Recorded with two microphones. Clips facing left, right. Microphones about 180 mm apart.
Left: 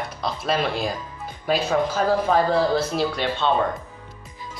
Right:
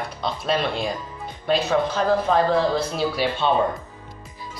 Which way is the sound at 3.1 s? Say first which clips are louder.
Right 1 dB; 5° right (ahead or behind).